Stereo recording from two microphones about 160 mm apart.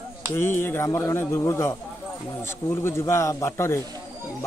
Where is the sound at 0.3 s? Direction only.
15° left (ahead or behind).